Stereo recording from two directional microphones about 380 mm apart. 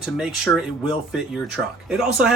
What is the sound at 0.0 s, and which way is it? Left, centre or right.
Speech, centre.